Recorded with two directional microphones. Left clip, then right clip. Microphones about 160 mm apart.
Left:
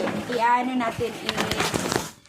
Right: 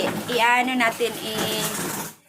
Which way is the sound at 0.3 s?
Centre (ahead or behind).